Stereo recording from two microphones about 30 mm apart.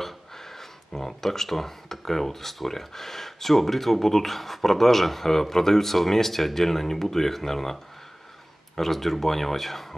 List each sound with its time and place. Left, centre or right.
0.0 s speech: centre